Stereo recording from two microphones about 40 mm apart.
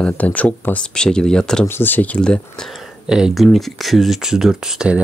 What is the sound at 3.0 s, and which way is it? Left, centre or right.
Speech, centre.